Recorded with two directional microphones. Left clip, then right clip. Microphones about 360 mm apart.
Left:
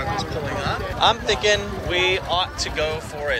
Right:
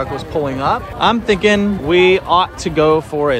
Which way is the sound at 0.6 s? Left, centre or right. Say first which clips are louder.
Right 4 dB; centre.